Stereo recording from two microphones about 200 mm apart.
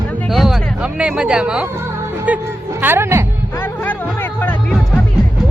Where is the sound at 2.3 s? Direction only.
10° right (ahead or behind).